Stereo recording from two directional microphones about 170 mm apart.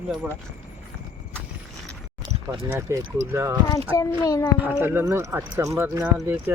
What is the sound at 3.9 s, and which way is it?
Speech, 20° left (ahead or behind).